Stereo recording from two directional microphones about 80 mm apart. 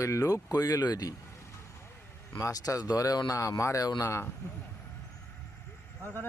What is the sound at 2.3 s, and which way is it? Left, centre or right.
Speech, left.